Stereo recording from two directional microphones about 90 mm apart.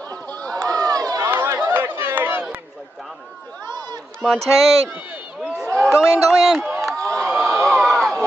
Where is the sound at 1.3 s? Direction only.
25° right (ahead or behind).